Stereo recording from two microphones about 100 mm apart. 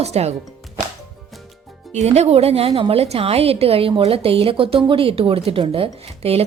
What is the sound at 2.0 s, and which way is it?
A woman's voice, 90° right.